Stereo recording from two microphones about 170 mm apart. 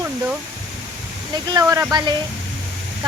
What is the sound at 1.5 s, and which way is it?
Speech, 20° right (ahead or behind).